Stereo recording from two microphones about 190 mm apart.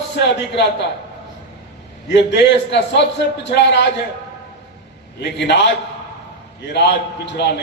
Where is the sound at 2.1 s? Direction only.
65° left (ahead or behind).